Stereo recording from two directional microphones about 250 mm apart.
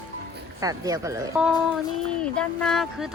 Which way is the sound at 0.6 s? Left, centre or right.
Centre.